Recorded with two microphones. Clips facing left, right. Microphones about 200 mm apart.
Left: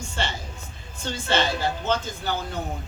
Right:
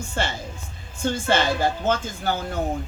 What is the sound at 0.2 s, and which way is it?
Speech, 50° right (ahead or behind).